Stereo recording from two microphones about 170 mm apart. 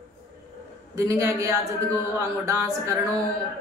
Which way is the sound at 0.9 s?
15° right (ahead or behind).